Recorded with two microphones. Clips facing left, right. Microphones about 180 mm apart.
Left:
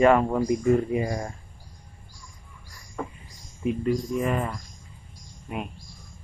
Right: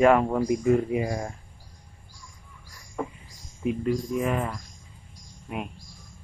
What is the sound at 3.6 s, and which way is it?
Speech, 5° right (ahead or behind).